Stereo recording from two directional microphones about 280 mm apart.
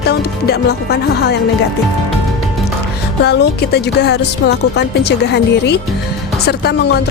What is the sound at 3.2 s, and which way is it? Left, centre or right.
Speech, left.